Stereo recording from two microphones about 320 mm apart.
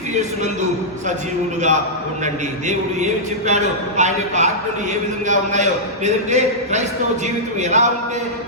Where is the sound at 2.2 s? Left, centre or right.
Right.